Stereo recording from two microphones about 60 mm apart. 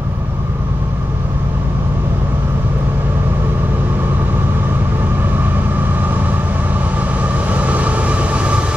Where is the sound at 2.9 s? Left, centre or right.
Right.